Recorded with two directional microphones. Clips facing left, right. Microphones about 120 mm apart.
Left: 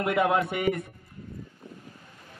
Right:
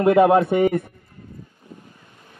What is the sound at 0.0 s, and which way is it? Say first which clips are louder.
Speech: right 10 dB; 30° right (ahead or behind).